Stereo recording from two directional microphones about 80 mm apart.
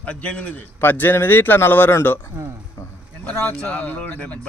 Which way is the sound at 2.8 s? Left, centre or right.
Left.